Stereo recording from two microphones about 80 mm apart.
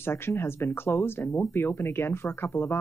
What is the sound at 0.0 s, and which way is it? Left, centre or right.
Speech, left.